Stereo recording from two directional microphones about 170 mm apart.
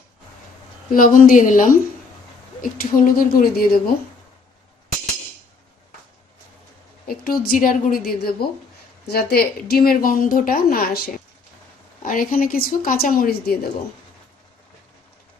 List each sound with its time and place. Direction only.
0.9 s a woman's voice: 55° left (ahead or behind)
7.1 s a woman's voice: 60° left (ahead or behind)